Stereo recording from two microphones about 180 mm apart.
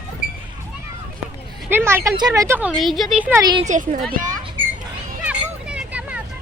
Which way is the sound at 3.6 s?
45° right (ahead or behind).